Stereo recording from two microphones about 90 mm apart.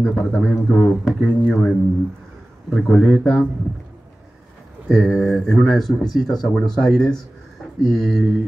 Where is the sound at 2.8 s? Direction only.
5° left (ahead or behind).